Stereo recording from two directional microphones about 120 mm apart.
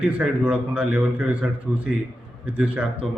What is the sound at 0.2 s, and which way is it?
A man's voice, 10° right (ahead or behind).